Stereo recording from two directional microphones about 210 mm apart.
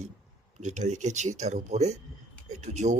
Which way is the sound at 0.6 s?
35° right (ahead or behind).